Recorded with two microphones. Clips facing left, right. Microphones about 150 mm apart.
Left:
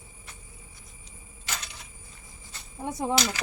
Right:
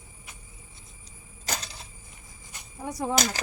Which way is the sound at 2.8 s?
25° left (ahead or behind).